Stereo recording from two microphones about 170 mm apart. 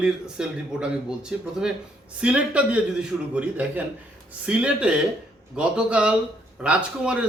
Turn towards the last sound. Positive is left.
turn(degrees=-5)  # may be behind; listen again after turning